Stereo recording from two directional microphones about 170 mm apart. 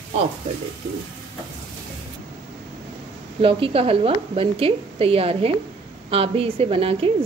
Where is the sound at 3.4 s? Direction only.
35° right (ahead or behind).